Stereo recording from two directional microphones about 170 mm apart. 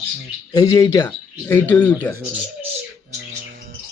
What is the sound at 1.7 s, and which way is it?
Speech, 5° left (ahead or behind).